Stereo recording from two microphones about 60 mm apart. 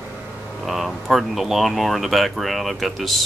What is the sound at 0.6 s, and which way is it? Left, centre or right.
Speech, centre.